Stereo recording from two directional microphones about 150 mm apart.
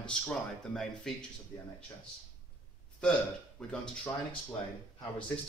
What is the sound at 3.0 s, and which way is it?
Speech, 5° left (ahead or behind).